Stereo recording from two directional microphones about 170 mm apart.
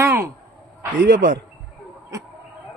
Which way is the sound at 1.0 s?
90° right.